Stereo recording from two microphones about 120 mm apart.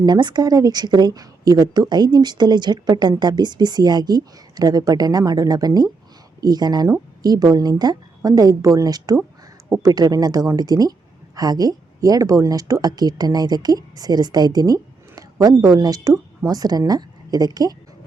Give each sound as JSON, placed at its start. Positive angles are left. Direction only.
{"t": 0.0, "sound": "speech", "side_deg": -35}